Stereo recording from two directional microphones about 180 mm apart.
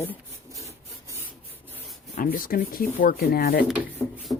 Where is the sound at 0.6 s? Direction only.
15° right (ahead or behind).